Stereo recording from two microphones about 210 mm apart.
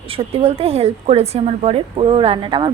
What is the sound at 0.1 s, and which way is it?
A woman's voice, 25° right (ahead or behind).